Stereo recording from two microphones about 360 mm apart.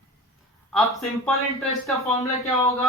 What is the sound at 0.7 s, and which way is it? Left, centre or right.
Speech, centre.